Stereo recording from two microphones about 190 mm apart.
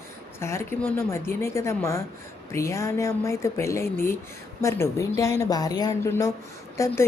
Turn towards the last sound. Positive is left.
turn(degrees=15)  # may be behind; listen again after turning